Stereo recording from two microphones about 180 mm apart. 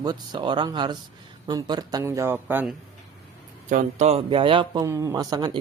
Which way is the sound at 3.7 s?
45° right (ahead or behind).